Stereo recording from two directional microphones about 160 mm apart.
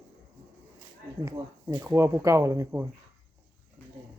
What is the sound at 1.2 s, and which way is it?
Speech, 15° right (ahead or behind).